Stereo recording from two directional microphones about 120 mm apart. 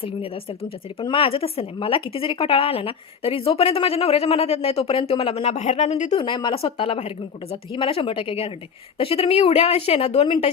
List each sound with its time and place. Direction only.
1.0 s speech: 45° left (ahead or behind); by 6.1 s 70° left (ahead or behind)
6.1 s a woman's voice: 40° left (ahead or behind)